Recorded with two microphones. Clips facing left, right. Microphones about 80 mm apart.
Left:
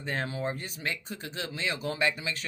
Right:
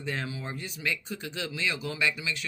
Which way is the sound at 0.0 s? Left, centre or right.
Left.